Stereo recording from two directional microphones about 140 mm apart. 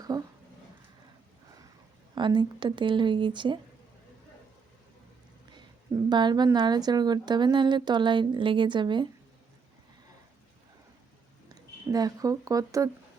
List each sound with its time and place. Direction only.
0.1 s a sound: 30° right (ahead or behind)
2.1 s a woman's voice: 35° right (ahead or behind)
6.1 s a woman's voice: 30° right (ahead or behind)
11.4 s speech: 30° right (ahead or behind)